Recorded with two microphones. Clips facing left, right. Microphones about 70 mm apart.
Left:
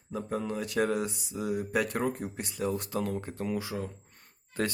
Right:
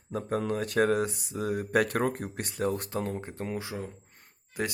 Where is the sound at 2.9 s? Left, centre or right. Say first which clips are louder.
Even; right.